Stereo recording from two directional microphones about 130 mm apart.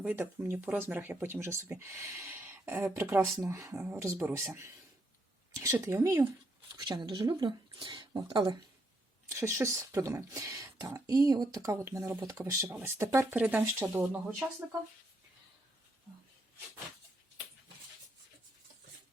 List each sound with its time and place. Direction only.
0.0 s speech: 15° right (ahead or behind)
5.8 s speech: 20° right (ahead or behind)
6.7 s speech: 30° right (ahead or behind)
9.3 s speech: 20° right (ahead or behind)